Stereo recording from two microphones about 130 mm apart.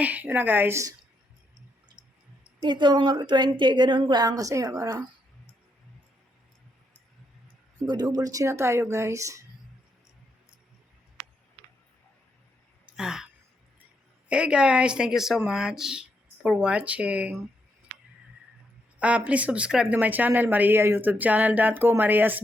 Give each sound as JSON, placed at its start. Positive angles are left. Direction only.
{"t": 0.0, "sound": "speech", "side_deg": -10}
{"t": 2.6, "sound": "a woman's voice", "side_deg": -35}
{"t": 7.9, "sound": "a woman's voice", "side_deg": -30}
{"t": 12.8, "sound": "a sound", "side_deg": -5}
{"t": 14.3, "sound": "speech", "side_deg": -10}
{"t": 18.9, "sound": "speech", "side_deg": -10}